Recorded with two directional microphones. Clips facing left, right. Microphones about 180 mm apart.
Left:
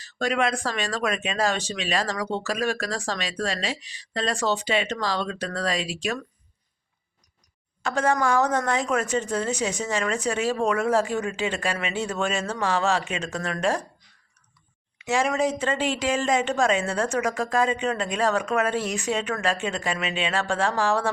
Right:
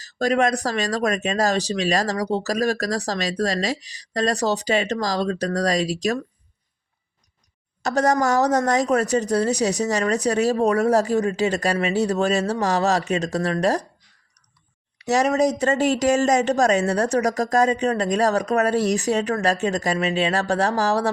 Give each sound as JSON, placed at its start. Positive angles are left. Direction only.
{"t": 0.0, "sound": "speech", "side_deg": -40}
{"t": 7.8, "sound": "speech", "side_deg": -40}
{"t": 14.9, "sound": "speech", "side_deg": -40}